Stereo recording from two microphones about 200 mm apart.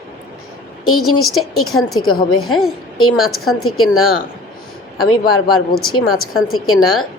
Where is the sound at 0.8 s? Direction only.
90° left.